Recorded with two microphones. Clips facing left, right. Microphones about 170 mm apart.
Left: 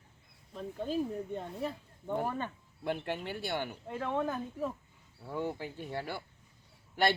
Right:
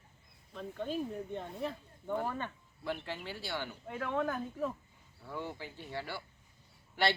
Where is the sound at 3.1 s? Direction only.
55° left (ahead or behind).